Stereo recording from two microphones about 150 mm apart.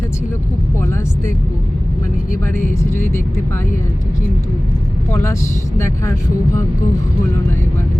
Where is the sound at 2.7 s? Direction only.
15° left (ahead or behind).